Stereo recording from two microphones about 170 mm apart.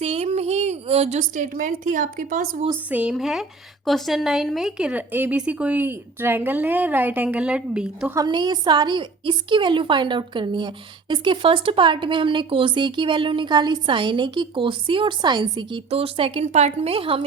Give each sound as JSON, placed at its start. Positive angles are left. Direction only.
{"t": 0.0, "sound": "a woman's voice", "side_deg": -35}
{"t": 2.9, "sound": "speech", "side_deg": -5}
{"t": 8.1, "sound": "speech", "side_deg": -25}